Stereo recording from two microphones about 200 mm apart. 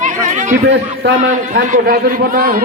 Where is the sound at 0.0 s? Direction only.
40° right (ahead or behind).